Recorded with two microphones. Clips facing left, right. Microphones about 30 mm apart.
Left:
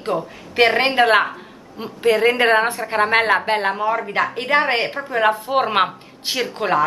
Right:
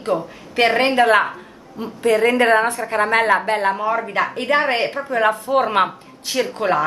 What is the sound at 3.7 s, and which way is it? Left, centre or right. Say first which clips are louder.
A man's voice: even; centre.